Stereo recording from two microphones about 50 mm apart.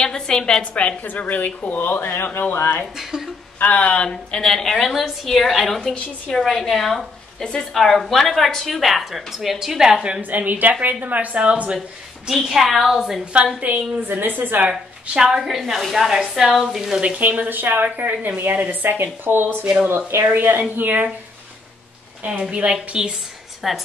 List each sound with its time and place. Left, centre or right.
0.0 s a woman's voice: centre
1.0 s speech: left
3.0 s a woman's voice: centre
3.5 s a woman's voice: left; by 5.8 s centre
5.8 s a woman's voice: centre
6.4 s a woman's voice: centre
10.3 s a woman's voice: right
12.3 s a woman's voice: centre
13.2 s a woman's voice: right
14.7 s a woman's voice: centre
17.2 s a woman's voice: right
22.4 s a woman's voice: centre
23.6 s a woman's voice: centre